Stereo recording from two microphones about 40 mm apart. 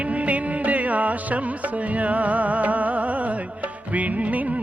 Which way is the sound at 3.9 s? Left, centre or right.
Right.